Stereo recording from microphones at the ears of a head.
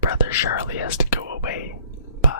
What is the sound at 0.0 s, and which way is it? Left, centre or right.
Whispering, left.